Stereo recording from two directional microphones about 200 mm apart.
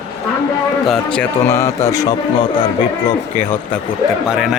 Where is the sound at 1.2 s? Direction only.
15° left (ahead or behind).